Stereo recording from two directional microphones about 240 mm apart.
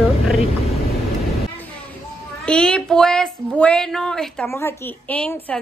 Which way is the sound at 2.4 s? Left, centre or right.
Centre.